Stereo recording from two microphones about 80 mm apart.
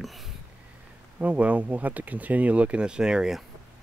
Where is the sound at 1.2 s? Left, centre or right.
Centre.